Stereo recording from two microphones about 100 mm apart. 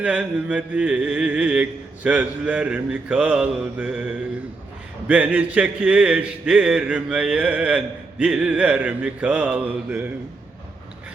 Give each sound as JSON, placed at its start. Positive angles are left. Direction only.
{"t": 0.0, "sound": "a man's voice", "side_deg": -10}